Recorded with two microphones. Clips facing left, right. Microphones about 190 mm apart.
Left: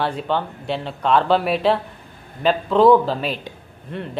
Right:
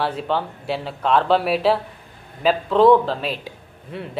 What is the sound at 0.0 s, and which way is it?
Speech, centre (ahead or behind).